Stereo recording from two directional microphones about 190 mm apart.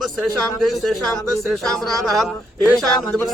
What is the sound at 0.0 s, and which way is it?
Speech, centre (ahead or behind).